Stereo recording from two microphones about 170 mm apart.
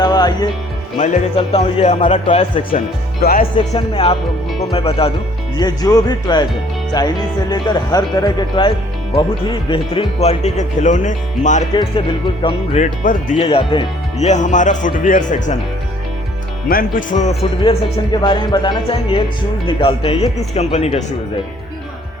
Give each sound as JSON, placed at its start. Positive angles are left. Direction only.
{"t": 0.0, "sound": "music", "side_deg": 25}
{"t": 0.9, "sound": "speech", "side_deg": 45}
{"t": 3.2, "sound": "speech", "side_deg": 65}
{"t": 3.8, "sound": "speech", "side_deg": 30}
{"t": 5.5, "sound": "speech", "side_deg": 25}
{"t": 11.7, "sound": "speech", "side_deg": 25}
{"t": 12.7, "sound": "speech", "side_deg": 50}
{"t": 16.6, "sound": "speech", "side_deg": 55}
{"t": 17.6, "sound": "speech", "side_deg": 30}